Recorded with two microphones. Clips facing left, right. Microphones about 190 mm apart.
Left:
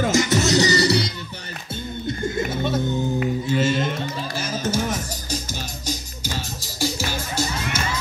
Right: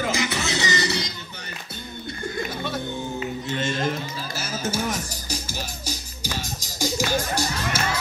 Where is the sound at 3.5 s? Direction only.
5° left (ahead or behind).